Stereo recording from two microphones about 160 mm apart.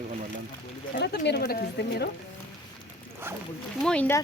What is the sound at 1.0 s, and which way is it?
A woman's voice, 90° left.